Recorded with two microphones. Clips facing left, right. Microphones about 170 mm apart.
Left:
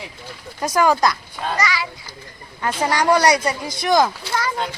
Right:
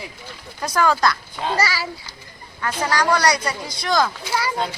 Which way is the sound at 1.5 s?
40° right (ahead or behind).